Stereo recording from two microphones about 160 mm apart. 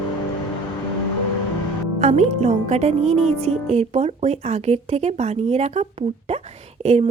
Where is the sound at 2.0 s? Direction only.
45° right (ahead or behind).